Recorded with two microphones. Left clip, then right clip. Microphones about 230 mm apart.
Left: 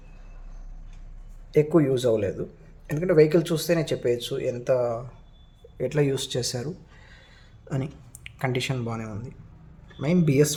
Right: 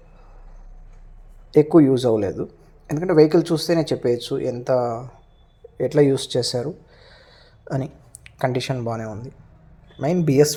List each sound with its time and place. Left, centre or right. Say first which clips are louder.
1.5 s speech: right 6 dB; centre
8.4 s speech: right 5 dB; centre